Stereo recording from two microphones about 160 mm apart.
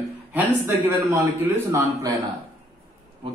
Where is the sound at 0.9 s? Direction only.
15° right (ahead or behind).